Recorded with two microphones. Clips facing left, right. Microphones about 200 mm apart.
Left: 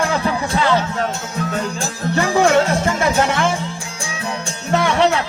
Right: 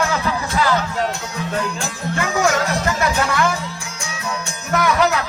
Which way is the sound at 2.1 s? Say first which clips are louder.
Left 5 dB; 30° left (ahead or behind).